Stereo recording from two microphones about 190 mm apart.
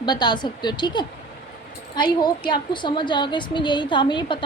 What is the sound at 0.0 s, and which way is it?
A woman's voice, 20° left (ahead or behind).